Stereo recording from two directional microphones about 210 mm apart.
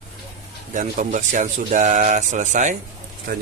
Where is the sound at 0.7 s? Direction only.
40° right (ahead or behind).